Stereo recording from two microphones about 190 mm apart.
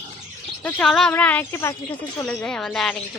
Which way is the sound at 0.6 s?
5° left (ahead or behind).